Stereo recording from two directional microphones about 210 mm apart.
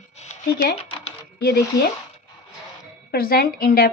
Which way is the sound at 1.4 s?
45° left (ahead or behind).